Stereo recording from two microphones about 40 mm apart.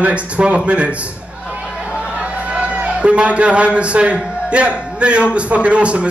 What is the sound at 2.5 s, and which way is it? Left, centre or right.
A man's voice, right.